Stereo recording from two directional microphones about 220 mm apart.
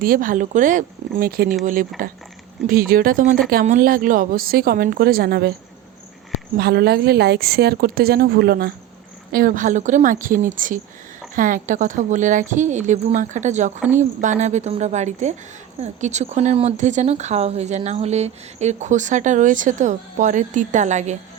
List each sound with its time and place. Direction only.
0.0 s speech: 40° right (ahead or behind)
6.6 s a woman's voice: 45° right (ahead or behind)